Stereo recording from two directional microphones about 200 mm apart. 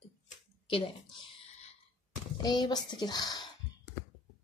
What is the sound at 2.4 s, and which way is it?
Speech, 20° left (ahead or behind).